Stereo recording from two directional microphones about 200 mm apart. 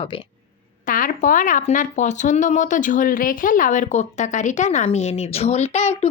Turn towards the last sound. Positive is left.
turn(degrees=35)  # may be behind; listen again after turning